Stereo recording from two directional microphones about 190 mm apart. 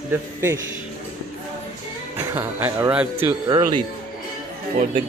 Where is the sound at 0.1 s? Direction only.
15° right (ahead or behind).